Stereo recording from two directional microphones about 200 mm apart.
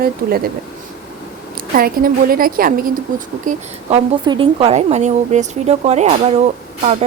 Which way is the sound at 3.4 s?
35° right (ahead or behind).